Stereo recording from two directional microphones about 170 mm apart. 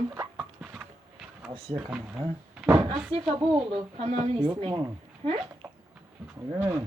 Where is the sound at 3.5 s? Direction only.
30° right (ahead or behind).